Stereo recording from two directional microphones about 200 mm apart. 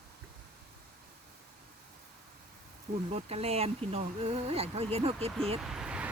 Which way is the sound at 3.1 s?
30° right (ahead or behind).